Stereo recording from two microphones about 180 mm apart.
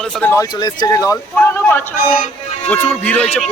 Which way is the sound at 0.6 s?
20° left (ahead or behind).